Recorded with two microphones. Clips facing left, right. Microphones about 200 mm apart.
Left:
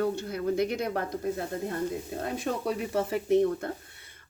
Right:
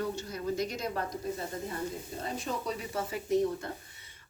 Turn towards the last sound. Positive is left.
turn(degrees=60)  # may be behind; listen again after turning